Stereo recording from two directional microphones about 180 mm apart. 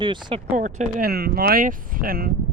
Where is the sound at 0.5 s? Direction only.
45° right (ahead or behind).